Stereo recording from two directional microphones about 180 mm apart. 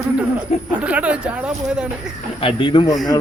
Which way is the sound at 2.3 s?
30° left (ahead or behind).